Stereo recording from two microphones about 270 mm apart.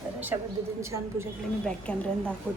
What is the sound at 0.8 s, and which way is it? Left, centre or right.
Speech, centre.